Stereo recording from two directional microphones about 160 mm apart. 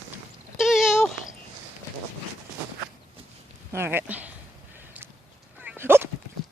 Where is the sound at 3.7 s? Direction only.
15° right (ahead or behind).